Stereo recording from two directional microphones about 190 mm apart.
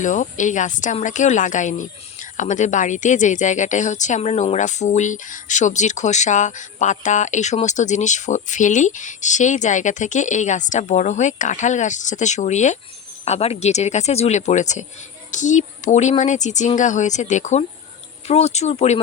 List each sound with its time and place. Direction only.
0.0 s a woman's voice: 40° left (ahead or behind)